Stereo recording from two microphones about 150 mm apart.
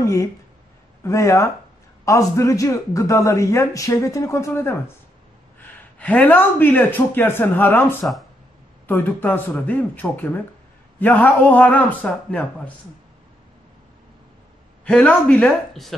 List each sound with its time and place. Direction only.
0.0 s a man's voice: 20° left (ahead or behind)
14.9 s a man's voice: 5° left (ahead or behind)